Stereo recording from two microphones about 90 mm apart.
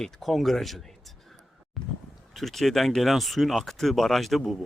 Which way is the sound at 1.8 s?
Centre (ahead or behind).